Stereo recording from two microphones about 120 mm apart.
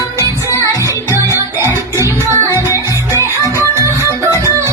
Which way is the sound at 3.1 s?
25° left (ahead or behind).